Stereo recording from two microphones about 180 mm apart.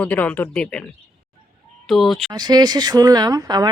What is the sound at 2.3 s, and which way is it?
Speech, 25° right (ahead or behind).